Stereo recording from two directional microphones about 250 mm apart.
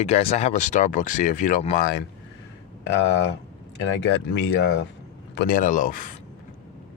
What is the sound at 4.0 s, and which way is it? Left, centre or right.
Speech, left.